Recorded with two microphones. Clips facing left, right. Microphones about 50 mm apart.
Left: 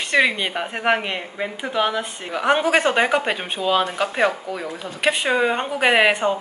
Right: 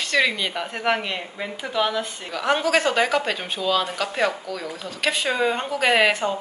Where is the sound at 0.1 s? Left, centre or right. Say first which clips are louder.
Left 3 dB; left.